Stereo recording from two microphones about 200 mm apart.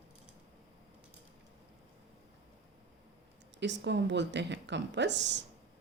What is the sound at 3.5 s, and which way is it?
Speech, 60° right (ahead or behind).